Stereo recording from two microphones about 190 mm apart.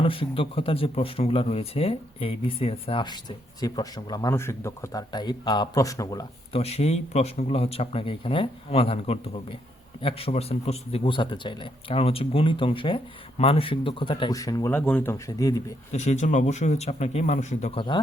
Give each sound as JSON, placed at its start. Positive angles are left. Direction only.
{"t": 0.0, "sound": "speech", "side_deg": 30}
{"t": 6.6, "sound": "a man's voice", "side_deg": 35}
{"t": 15.1, "sound": "speech", "side_deg": 20}
{"t": 15.9, "sound": "a man's voice", "side_deg": 35}
{"t": 17.7, "sound": "speech", "side_deg": 25}